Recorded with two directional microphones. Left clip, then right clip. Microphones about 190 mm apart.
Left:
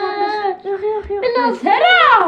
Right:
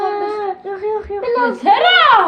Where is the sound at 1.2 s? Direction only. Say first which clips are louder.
Even; 40° left (ahead or behind).